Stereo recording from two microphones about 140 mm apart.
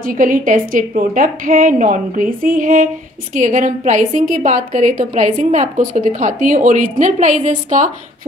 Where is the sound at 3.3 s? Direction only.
65° right (ahead or behind).